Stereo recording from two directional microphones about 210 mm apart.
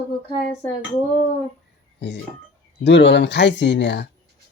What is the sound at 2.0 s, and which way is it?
Speech, 55° left (ahead or behind).